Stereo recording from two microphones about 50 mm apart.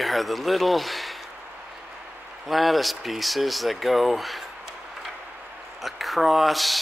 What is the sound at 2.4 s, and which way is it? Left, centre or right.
Speech, centre.